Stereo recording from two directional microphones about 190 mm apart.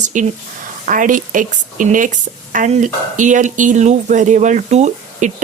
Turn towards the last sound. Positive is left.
turn(degrees=-40)  # may be behind; listen again after turning